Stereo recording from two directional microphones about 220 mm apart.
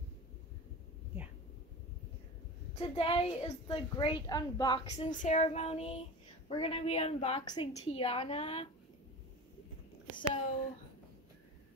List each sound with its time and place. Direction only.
2.8 s a woman's voice: 25° left (ahead or behind)